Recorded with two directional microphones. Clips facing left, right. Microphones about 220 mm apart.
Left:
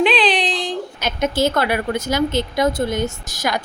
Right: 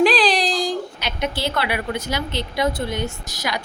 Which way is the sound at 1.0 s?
45° left (ahead or behind).